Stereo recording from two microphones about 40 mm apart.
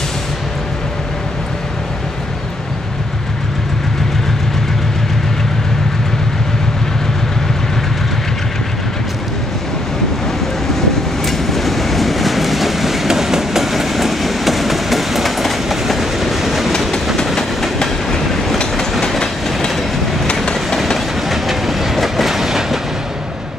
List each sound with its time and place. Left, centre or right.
11.2 s train: centre
17.8 s train: centre
20.7 s train: centre